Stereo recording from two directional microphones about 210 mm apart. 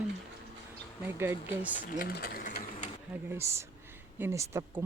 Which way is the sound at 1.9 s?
45° left (ahead or behind).